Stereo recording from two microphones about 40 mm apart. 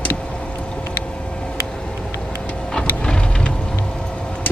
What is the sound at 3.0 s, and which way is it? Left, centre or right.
Vehicle, left.